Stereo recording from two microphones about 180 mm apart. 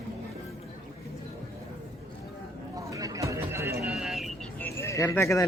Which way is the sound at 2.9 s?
20° right (ahead or behind).